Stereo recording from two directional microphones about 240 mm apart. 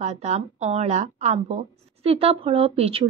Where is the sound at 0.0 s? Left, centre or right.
Right.